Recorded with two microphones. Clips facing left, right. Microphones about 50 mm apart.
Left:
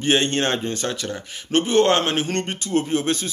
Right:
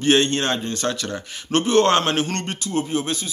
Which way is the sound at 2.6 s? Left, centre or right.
Left.